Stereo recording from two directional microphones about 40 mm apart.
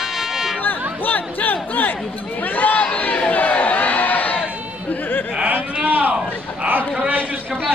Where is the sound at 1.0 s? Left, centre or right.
Left.